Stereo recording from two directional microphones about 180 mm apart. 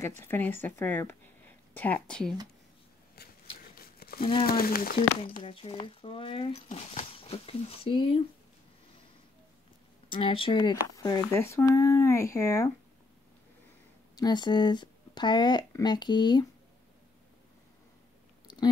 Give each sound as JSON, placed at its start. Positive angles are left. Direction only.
{"t": 0.2, "sound": "a woman's voice", "side_deg": 10}
{"t": 3.2, "sound": "a sound", "side_deg": 60}
{"t": 3.7, "sound": "crumpling", "side_deg": 55}
{"t": 4.2, "sound": "speech", "side_deg": 30}
{"t": 4.5, "sound": "speech", "side_deg": 55}
{"t": 5.5, "sound": "speech", "side_deg": 30}
{"t": 10.1, "sound": "speech", "side_deg": 30}
{"t": 14.1, "sound": "speech", "side_deg": 25}